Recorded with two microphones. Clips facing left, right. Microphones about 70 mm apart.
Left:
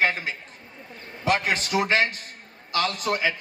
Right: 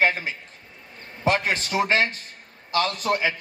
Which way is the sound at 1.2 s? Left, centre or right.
Right.